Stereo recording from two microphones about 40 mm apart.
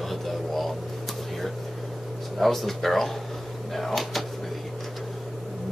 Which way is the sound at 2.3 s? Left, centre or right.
Centre.